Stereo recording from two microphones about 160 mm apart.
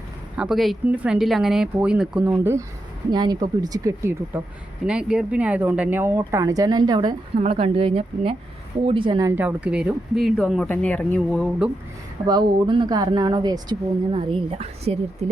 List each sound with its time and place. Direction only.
0.3 s speech: 5° right (ahead or behind)
3.1 s speech: 25° right (ahead or behind)
4.9 s speech: 5° right (ahead or behind); by 7.2 s 25° right (ahead or behind)
7.3 s speech: 40° right (ahead or behind)
9.3 s speech: 10° right (ahead or behind); by 11.4 s 5° left (ahead or behind)
12.2 s speech: 25° right (ahead or behind)